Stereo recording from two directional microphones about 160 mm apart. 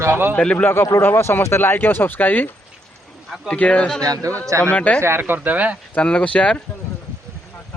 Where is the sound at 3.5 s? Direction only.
10° left (ahead or behind).